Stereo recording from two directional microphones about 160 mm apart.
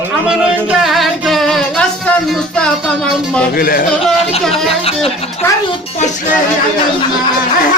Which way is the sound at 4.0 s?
Centre (ahead or behind).